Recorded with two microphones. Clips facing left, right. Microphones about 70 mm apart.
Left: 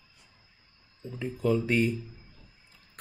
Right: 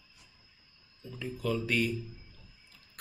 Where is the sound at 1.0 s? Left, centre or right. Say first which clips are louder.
Left 6 dB; left.